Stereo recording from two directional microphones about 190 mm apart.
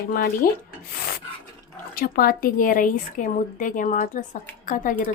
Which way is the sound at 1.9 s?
50° left (ahead or behind).